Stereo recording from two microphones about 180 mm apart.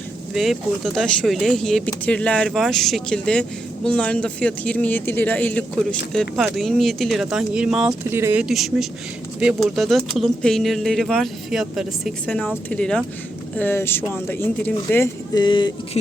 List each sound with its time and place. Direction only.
0.4 s speech: centre (ahead or behind)
15.4 s speech: 25° left (ahead or behind)